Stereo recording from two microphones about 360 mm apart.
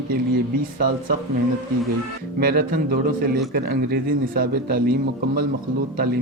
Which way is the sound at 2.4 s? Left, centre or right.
Right.